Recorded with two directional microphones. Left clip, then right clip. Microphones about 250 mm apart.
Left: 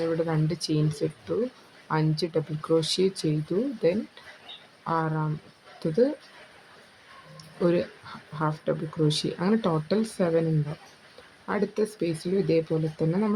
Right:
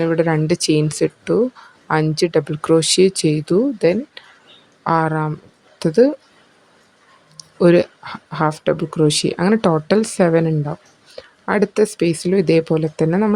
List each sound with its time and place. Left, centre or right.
0.0 s speech: right
7.3 s speech: right
11.4 s speech: right